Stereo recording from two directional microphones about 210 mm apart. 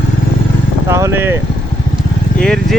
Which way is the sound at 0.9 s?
10° right (ahead or behind).